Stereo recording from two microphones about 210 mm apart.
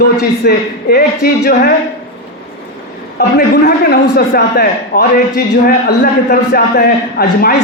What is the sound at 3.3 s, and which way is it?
A man's voice, 45° left (ahead or behind).